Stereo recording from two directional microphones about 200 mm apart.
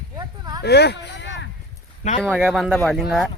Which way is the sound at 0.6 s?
55° left (ahead or behind).